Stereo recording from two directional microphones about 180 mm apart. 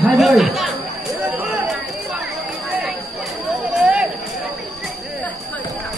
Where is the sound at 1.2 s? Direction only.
10° right (ahead or behind).